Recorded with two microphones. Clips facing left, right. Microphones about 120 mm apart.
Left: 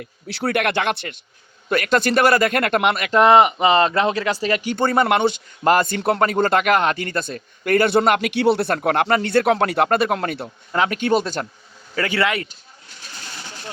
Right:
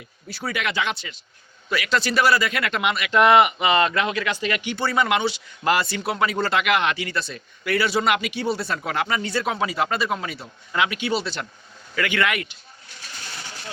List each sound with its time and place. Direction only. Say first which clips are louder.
0.0 s speech: left 7 dB; 65° left (ahead or behind); by 8.3 s 50° left (ahead or behind)
8.3 s speech: left 8 dB; 65° left (ahead or behind)
10.7 s speech: left 5 dB; 40° left (ahead or behind)
11.9 s speech: left 2 dB; 35° left (ahead or behind)